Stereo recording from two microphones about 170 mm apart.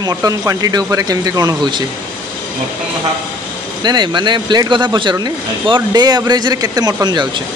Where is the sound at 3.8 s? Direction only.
25° right (ahead or behind).